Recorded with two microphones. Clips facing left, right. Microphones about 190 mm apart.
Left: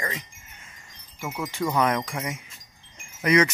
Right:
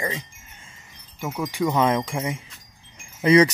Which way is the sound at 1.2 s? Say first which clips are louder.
Right 4 dB; 15° right (ahead or behind).